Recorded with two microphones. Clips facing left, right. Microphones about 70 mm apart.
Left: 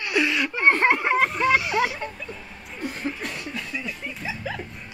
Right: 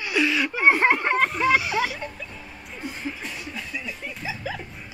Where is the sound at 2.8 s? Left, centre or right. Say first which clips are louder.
Left 3 dB; left.